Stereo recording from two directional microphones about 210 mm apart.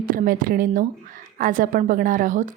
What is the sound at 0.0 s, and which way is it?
A woman's voice, 40° right (ahead or behind).